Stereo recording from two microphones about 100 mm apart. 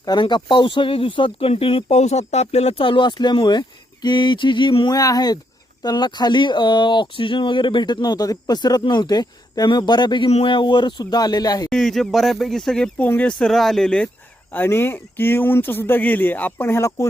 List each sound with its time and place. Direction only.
0.0 s speech: 45° left (ahead or behind)
4.9 s speech: 35° left (ahead or behind)
11.7 s speech: 5° left (ahead or behind)
13.0 s speech: 15° left (ahead or behind)
14.5 s speech: 20° left (ahead or behind)